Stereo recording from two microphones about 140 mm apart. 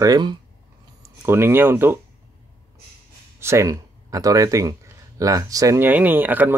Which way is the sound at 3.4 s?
20° right (ahead or behind).